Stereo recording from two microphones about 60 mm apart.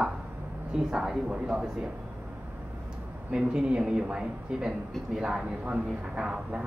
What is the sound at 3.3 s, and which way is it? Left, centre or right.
Speech, centre.